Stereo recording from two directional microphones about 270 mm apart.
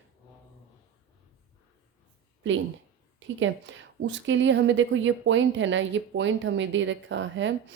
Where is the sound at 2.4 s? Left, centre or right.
Right.